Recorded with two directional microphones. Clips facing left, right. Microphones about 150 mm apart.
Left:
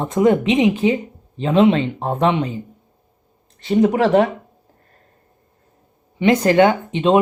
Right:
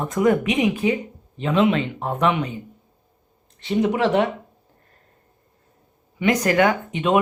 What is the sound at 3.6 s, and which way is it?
Speech, 40° left (ahead or behind).